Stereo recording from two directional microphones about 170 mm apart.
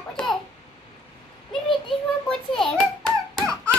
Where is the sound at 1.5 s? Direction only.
Centre (ahead or behind).